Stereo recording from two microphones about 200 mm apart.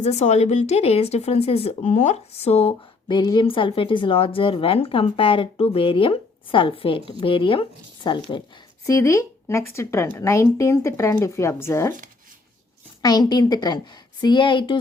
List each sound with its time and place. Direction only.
0.0 s speech: 35° left (ahead or behind); by 11.9 s 15° left (ahead or behind)
13.0 s speech: 20° left (ahead or behind)